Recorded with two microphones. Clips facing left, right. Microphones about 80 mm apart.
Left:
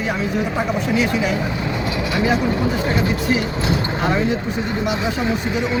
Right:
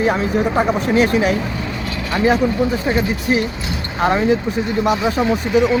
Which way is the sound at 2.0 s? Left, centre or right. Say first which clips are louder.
Right 4 dB; right.